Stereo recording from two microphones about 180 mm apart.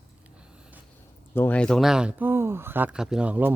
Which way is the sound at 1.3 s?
10° left (ahead or behind).